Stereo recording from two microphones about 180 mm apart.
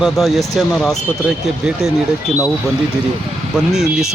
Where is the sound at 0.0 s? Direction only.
Centre (ahead or behind).